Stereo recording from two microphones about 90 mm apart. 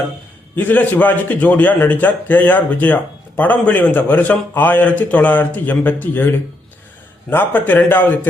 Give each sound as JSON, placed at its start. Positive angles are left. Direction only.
{"t": 0.5, "sound": "a man's voice", "side_deg": 20}